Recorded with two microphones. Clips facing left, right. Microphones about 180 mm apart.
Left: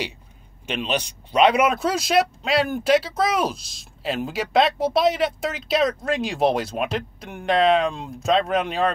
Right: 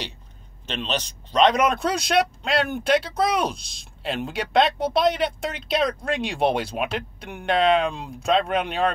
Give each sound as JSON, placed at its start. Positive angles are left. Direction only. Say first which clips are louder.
{"t": 0.7, "sound": "speech", "louder": "left 3 dB", "side_deg": 10}